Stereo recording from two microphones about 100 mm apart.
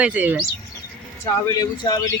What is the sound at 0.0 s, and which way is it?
Speech, 15° right (ahead or behind).